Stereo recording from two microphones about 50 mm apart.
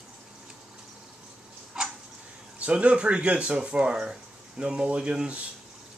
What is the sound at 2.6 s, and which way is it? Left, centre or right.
Speech, right.